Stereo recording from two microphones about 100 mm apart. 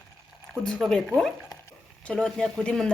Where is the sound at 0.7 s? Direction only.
Centre (ahead or behind).